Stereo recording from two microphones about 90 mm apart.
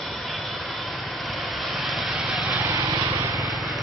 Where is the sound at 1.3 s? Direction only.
Centre (ahead or behind).